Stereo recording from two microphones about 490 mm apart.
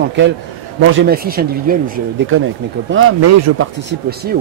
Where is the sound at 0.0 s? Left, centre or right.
Right.